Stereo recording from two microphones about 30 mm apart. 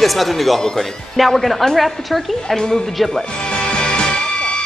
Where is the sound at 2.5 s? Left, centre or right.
Centre.